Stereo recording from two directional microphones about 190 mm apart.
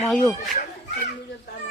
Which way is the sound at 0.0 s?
5° left (ahead or behind).